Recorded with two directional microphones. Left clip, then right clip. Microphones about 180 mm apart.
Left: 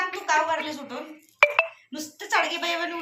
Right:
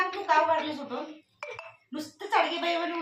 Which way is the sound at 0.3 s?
15° right (ahead or behind).